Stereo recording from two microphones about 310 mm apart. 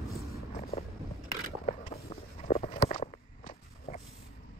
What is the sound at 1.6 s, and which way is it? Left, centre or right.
Walk, left.